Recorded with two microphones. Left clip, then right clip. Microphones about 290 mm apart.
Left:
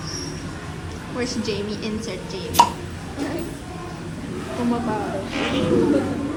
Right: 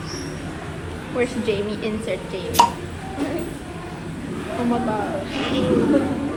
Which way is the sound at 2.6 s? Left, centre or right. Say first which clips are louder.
Even; centre.